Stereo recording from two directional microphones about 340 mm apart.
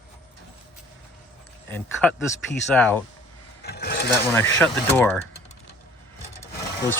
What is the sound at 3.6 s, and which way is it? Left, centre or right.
Sewing machine, left.